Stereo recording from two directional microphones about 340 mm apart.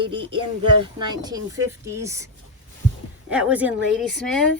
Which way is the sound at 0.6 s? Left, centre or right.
Centre.